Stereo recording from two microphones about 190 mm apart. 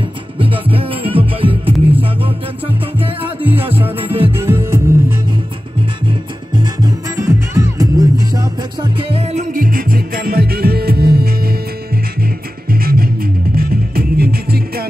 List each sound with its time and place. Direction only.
0.4 s music: 30° right (ahead or behind)
3.3 s music: 10° right (ahead or behind)
6.5 s music: 20° right (ahead or behind); by 14.9 s 55° right (ahead or behind)